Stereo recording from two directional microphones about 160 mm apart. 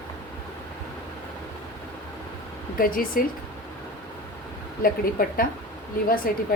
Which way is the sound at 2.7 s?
60° left (ahead or behind).